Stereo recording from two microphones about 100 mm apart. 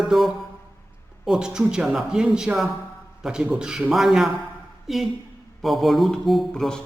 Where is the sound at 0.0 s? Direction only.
Centre (ahead or behind).